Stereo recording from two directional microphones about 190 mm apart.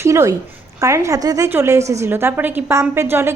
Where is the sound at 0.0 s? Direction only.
15° right (ahead or behind).